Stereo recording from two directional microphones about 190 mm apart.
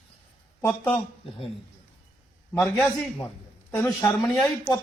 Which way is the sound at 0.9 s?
30° left (ahead or behind).